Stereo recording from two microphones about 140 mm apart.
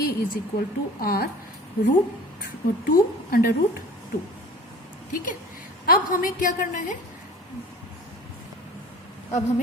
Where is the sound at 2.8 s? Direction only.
90° left.